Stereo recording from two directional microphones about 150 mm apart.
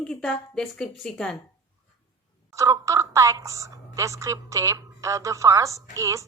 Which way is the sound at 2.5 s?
20° right (ahead or behind).